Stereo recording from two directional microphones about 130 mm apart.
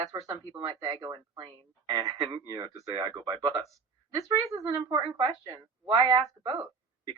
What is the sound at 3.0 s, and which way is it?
Speech, 35° right (ahead or behind).